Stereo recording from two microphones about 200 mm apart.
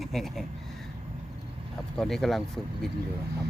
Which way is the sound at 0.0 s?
Centre (ahead or behind).